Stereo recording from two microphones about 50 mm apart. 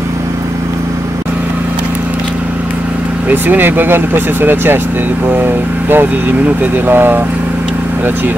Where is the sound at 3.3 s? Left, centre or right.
Right.